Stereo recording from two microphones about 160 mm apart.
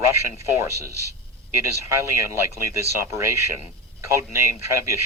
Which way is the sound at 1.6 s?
15° right (ahead or behind).